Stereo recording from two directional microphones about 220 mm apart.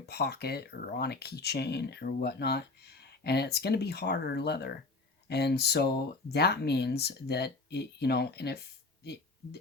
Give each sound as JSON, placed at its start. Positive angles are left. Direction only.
{"t": 0.0, "sound": "speech", "side_deg": 45}